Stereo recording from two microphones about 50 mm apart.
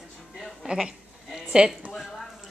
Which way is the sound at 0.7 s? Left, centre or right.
Centre.